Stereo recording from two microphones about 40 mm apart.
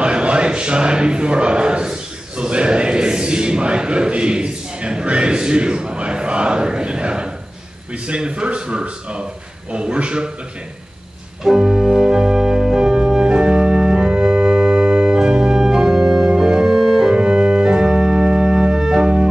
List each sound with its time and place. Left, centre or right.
0.0 s a man's voice: right
11.4 s organ: centre
13.3 s organ: centre
17.1 s organ: right